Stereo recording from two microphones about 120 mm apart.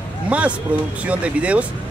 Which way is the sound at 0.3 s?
10° right (ahead or behind).